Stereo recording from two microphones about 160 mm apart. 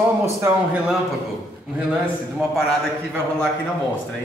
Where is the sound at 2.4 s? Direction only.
Centre (ahead or behind).